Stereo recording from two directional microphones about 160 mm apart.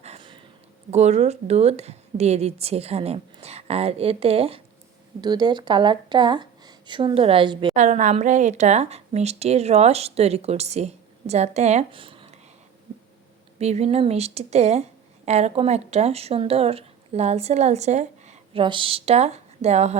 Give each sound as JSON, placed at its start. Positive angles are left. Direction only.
{"t": 0.2, "sound": "a sound", "side_deg": -30}
{"t": 0.9, "sound": "speech", "side_deg": -45}
{"t": 5.2, "sound": "a woman's voice", "side_deg": -25}
{"t": 7.8, "sound": "a woman's voice", "side_deg": -50}
{"t": 13.6, "sound": "a woman's voice", "side_deg": -40}
{"t": 18.6, "sound": "speech", "side_deg": -30}